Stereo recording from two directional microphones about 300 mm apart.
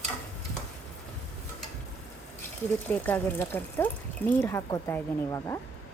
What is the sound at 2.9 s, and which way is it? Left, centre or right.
Speech, centre.